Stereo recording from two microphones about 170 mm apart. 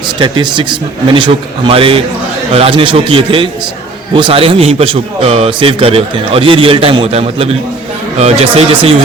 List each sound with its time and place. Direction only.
0.2 s a man's voice: 30° right (ahead or behind)